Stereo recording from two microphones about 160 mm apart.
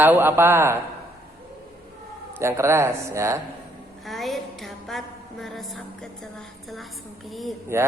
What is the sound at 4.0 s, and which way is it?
A woman's voice, centre (ahead or behind).